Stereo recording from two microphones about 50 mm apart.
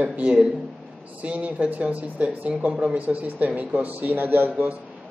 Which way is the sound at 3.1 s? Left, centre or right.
Right.